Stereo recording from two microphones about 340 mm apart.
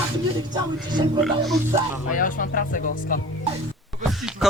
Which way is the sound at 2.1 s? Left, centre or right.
Left.